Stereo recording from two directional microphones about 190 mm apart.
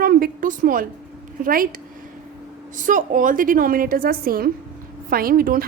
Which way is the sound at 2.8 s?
45° right (ahead or behind).